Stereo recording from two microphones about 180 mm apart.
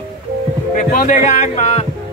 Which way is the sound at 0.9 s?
50° left (ahead or behind).